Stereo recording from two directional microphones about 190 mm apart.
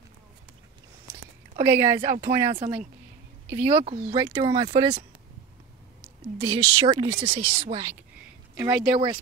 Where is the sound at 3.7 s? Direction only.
25° right (ahead or behind).